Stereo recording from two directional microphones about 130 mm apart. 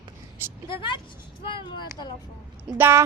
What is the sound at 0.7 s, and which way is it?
Speech, 40° left (ahead or behind).